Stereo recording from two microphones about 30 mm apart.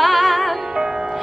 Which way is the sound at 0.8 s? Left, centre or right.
Right.